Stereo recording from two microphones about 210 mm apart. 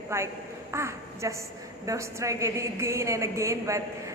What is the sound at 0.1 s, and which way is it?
A woman's voice, 10° right (ahead or behind).